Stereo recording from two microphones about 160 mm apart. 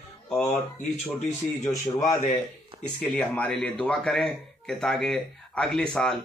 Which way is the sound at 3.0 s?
5° left (ahead or behind).